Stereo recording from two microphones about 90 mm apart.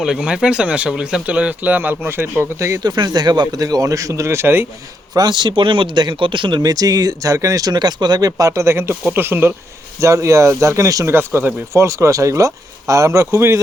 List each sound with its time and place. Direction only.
0.0 s speech: 5° right (ahead or behind); by 2.8 s 30° right (ahead or behind)
2.8 s speech: 50° right (ahead or behind); by 4.6 s 25° right (ahead or behind)
5.1 s speech: 55° right (ahead or behind)
6.6 s speech: 45° right (ahead or behind); by 9.6 s 25° right (ahead or behind)
10.0 s speech: 35° right (ahead or behind)
11.3 s speech: 20° right (ahead or behind)
11.7 s speech: 35° right (ahead or behind)